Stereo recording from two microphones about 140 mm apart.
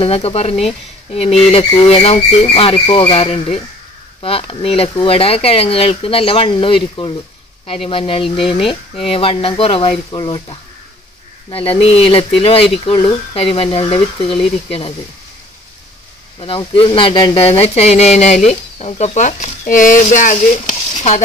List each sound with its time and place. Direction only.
0.0 s speech: 45° left (ahead or behind)
1.6 s speech: 30° left (ahead or behind)
1.9 s speech: 45° left (ahead or behind)
8.4 s speech: centre (ahead or behind)
9.0 s speech: 45° left (ahead or behind)
16.3 s speech: 40° left (ahead or behind); by 21.2 s 55° left (ahead or behind)